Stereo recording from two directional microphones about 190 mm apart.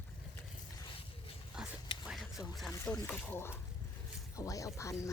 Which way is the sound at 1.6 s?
5° right (ahead or behind).